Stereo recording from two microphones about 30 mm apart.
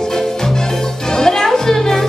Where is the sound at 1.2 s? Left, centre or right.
Left.